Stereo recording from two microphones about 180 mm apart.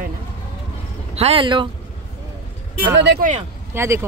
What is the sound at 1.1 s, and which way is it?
Speech, 35° right (ahead or behind).